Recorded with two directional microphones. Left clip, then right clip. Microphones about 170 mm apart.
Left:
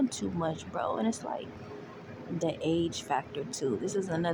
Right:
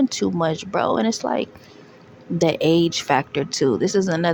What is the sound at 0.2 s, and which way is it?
Speech, 40° right (ahead or behind).